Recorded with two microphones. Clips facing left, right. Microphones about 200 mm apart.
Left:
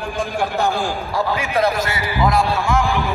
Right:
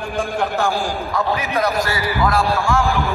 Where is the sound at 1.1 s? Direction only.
30° left (ahead or behind).